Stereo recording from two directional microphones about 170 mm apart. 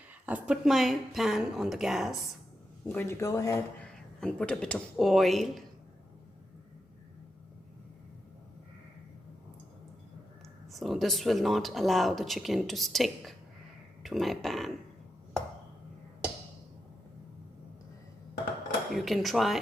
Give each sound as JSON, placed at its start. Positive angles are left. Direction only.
{"t": 0.3, "sound": "speech", "side_deg": -10}
{"t": 2.9, "sound": "speech", "side_deg": 10}
{"t": 3.9, "sound": "speech", "side_deg": 5}
{"t": 10.7, "sound": "speech", "side_deg": 0}
{"t": 18.9, "sound": "speech", "side_deg": 0}